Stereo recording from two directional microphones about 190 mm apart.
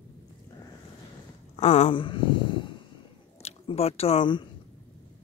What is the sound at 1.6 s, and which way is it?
Speech, 35° left (ahead or behind).